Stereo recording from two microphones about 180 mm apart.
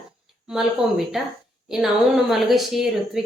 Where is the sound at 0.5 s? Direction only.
Centre (ahead or behind).